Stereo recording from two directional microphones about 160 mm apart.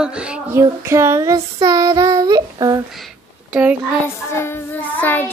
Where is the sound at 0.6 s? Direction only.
15° right (ahead or behind).